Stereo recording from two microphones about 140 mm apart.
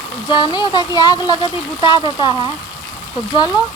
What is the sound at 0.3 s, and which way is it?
Speech, 30° left (ahead or behind).